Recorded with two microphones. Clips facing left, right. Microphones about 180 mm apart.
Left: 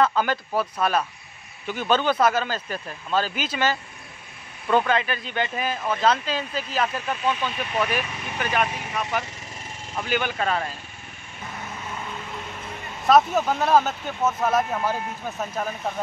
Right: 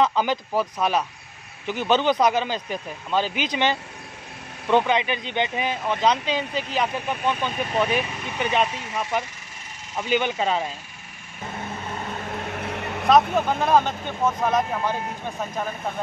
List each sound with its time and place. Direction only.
0.0 s speech: 15° right (ahead or behind)
4.8 s speech: 20° right (ahead or behind)
7.2 s speech: 45° right (ahead or behind)
7.7 s speech: 25° right (ahead or behind)
12.1 s vehicle: 55° right (ahead or behind)
13.1 s speech: 5° left (ahead or behind)